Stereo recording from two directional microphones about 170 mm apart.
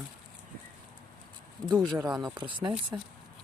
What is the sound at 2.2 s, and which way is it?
Speech, 25° right (ahead or behind).